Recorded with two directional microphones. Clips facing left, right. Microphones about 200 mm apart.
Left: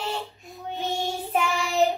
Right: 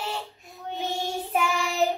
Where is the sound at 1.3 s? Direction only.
Centre (ahead or behind).